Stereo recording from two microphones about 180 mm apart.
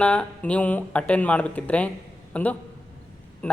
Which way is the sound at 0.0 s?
5° left (ahead or behind).